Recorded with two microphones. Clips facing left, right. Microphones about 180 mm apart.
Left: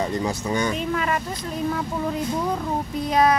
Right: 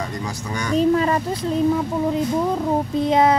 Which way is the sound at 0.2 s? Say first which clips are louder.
Left 4 dB; 20° left (ahead or behind).